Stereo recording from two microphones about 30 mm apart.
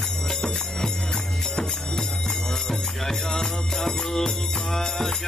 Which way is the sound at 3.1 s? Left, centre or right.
Centre.